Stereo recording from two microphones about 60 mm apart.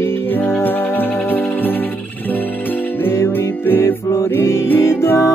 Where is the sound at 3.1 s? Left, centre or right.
Left.